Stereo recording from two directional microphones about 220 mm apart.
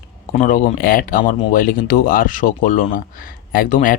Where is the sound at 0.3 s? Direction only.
35° left (ahead or behind).